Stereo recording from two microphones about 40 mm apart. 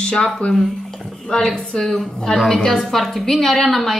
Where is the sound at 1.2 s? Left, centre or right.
Centre.